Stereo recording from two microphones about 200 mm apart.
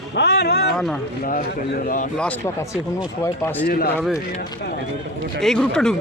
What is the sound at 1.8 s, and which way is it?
Speech, 40° left (ahead or behind).